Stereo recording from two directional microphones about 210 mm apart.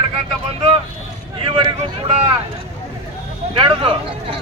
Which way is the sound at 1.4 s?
25° right (ahead or behind).